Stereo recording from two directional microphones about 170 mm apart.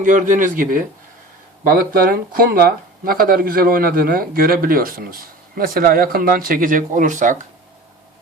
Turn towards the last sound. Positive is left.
turn(degrees=-45)  # may be behind; listen again after turning